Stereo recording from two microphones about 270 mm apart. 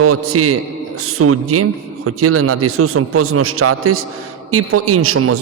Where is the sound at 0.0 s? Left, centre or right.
Right.